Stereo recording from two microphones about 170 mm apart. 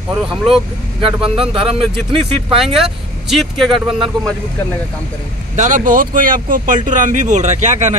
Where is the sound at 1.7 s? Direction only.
35° right (ahead or behind).